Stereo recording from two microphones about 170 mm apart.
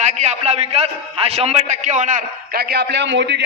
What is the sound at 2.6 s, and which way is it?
Speech, 70° right (ahead or behind).